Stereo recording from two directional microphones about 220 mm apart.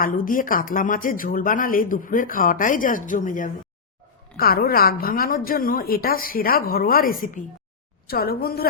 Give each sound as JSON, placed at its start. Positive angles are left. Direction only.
{"t": 0.0, "sound": "a woman's voice", "side_deg": 40}